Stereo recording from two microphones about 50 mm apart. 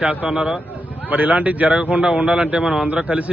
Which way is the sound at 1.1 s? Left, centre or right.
Right.